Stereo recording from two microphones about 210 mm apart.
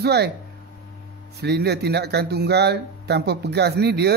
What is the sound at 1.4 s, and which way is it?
Speech, 50° right (ahead or behind).